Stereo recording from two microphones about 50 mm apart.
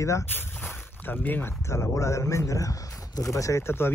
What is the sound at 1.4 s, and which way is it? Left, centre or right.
Speech, left.